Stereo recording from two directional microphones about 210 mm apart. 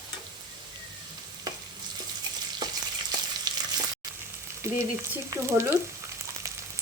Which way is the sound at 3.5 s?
20° right (ahead or behind).